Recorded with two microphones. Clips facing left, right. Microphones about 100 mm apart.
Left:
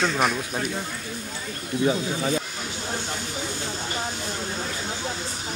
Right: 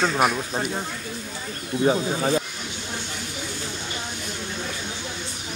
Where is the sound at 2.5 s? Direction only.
35° left (ahead or behind).